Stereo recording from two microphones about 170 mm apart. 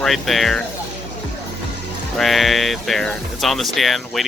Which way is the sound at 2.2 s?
Centre (ahead or behind).